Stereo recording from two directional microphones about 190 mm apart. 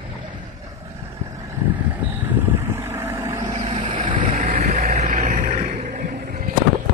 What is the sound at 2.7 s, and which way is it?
Vehicle, 15° right (ahead or behind).